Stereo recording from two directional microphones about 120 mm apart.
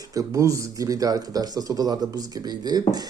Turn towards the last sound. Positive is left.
turn(degrees=-35)  # may be behind; listen again after turning